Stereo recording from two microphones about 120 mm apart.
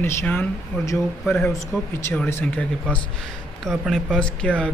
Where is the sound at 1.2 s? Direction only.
5° left (ahead or behind).